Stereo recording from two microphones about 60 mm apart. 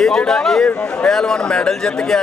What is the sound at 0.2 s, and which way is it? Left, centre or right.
Speech, centre.